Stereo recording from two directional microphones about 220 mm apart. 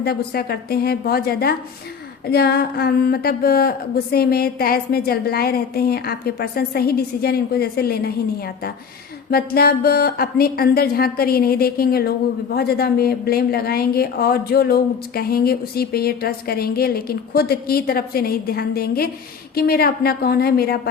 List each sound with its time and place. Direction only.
0.0 s a woman's voice: 45° left (ahead or behind)